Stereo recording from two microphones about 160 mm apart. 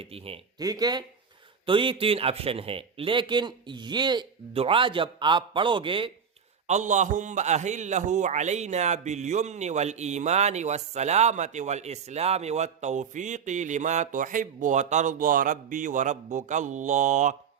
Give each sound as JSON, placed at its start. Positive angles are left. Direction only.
{"t": 0.0, "sound": "a man's voice", "side_deg": -35}
{"t": 0.6, "sound": "a man's voice", "side_deg": -25}
{"t": 6.7, "sound": "a man's voice", "side_deg": -50}